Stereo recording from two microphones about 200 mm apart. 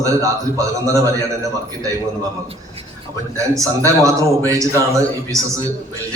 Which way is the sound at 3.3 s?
15° right (ahead or behind).